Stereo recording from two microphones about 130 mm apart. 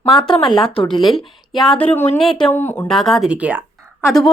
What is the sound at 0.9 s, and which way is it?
Speech, centre (ahead or behind).